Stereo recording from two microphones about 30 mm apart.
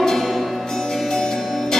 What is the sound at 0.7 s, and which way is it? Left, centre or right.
Music, centre.